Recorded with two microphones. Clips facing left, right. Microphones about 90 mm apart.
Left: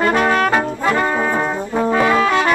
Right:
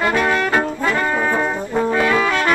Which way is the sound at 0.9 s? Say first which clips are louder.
Left 3 dB; 20° left (ahead or behind).